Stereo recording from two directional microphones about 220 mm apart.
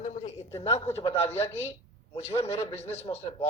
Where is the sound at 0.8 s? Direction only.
10° left (ahead or behind).